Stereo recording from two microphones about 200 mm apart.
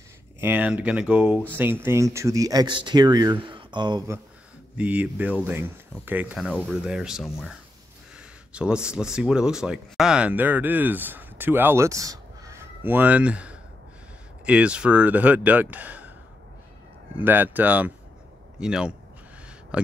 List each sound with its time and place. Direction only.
0.4 s speech: 10° right (ahead or behind)
4.7 s speech: 5° right (ahead or behind)
8.5 s speech: 5° right (ahead or behind)
17.2 s speech: 10° right (ahead or behind)